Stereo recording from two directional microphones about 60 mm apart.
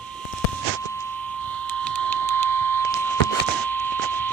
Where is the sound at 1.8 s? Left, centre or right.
Left.